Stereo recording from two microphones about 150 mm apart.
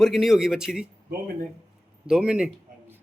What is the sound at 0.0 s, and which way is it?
Speech, centre (ahead or behind).